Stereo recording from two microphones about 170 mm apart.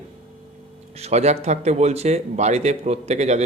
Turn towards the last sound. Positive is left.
turn(degrees=-40)  # may be behind; listen again after turning